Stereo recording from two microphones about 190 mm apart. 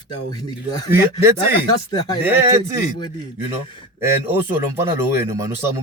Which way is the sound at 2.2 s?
10° right (ahead or behind).